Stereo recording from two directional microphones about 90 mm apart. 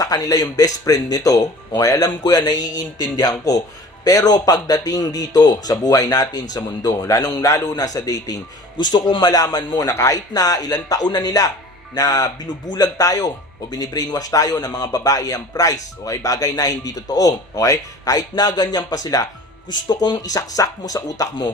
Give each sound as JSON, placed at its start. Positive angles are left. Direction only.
{"t": 0.0, "sound": "speech", "side_deg": 40}
{"t": 2.2, "sound": "speech", "side_deg": 50}
{"t": 8.8, "sound": "speech", "side_deg": 55}
{"t": 9.8, "sound": "speech", "side_deg": 30}
{"t": 10.3, "sound": "speech", "side_deg": 45}